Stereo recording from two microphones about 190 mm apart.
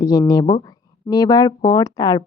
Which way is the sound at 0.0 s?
20° left (ahead or behind).